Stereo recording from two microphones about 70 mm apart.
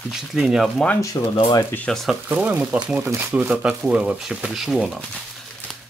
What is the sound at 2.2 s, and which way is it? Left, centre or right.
Speech, right.